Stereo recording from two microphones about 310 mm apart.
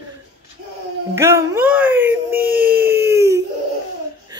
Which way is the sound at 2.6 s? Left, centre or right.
Right.